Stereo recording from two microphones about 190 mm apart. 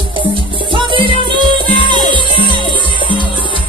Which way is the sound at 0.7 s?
25° right (ahead or behind).